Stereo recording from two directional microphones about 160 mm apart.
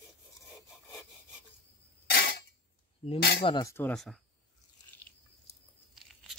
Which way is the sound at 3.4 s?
30° left (ahead or behind).